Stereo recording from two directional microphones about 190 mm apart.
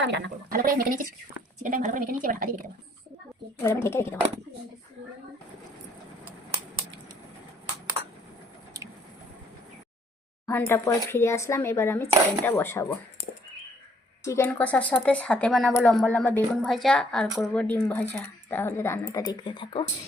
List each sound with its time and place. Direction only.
0.0 s a woman's voice: 65° right (ahead or behind)
0.6 s a woman's voice: 50° right (ahead or behind)
3.6 s a woman's voice: 15° left (ahead or behind)
10.4 s a woman's voice: 15° left (ahead or behind)
14.3 s a woman's voice: 10° left (ahead or behind)